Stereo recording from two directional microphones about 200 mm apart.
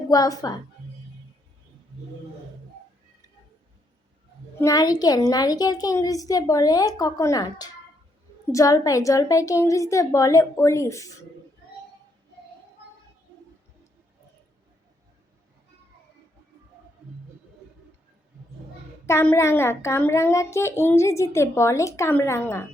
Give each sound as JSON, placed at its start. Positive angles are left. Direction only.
{"t": 0.1, "sound": "a woman's voice", "side_deg": 20}
{"t": 4.5, "sound": "a child's voice", "side_deg": 15}
{"t": 19.0, "sound": "a child's voice", "side_deg": 10}